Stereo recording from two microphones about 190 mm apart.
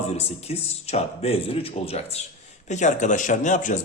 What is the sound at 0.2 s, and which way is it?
A man's voice, 35° left (ahead or behind).